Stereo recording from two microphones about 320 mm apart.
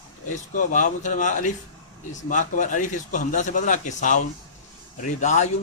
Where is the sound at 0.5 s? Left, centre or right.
Left.